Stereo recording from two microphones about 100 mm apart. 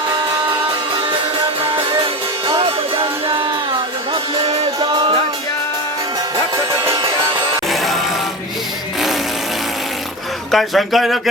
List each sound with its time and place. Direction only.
2.5 s music: 65° right (ahead or behind)
4.4 s music: 60° right (ahead or behind)
6.9 s music: 45° right (ahead or behind)
7.7 s music: centre (ahead or behind)
10.5 s speech: centre (ahead or behind)